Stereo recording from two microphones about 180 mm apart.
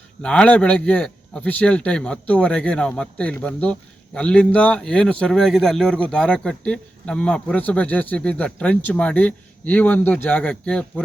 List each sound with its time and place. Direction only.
0.2 s speech: 5° left (ahead or behind)